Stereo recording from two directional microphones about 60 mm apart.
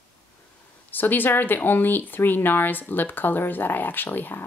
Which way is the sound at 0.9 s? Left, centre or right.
Left.